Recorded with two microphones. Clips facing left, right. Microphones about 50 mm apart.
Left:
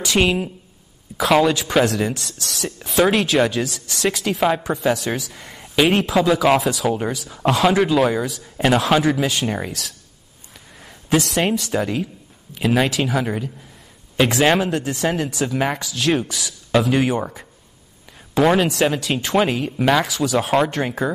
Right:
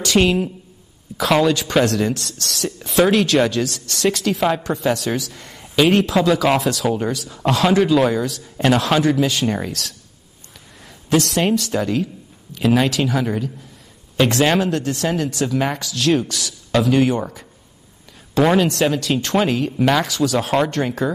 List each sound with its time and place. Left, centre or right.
0.0 s speech: centre